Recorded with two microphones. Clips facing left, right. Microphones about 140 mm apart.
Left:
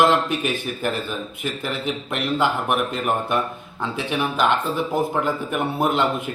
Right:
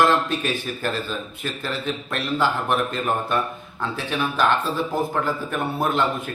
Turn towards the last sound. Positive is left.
turn(degrees=15)  # may be behind; listen again after turning